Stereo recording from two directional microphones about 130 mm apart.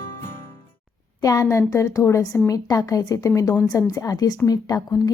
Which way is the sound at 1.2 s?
25° left (ahead or behind).